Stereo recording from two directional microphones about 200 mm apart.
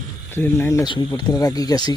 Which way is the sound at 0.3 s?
10° left (ahead or behind).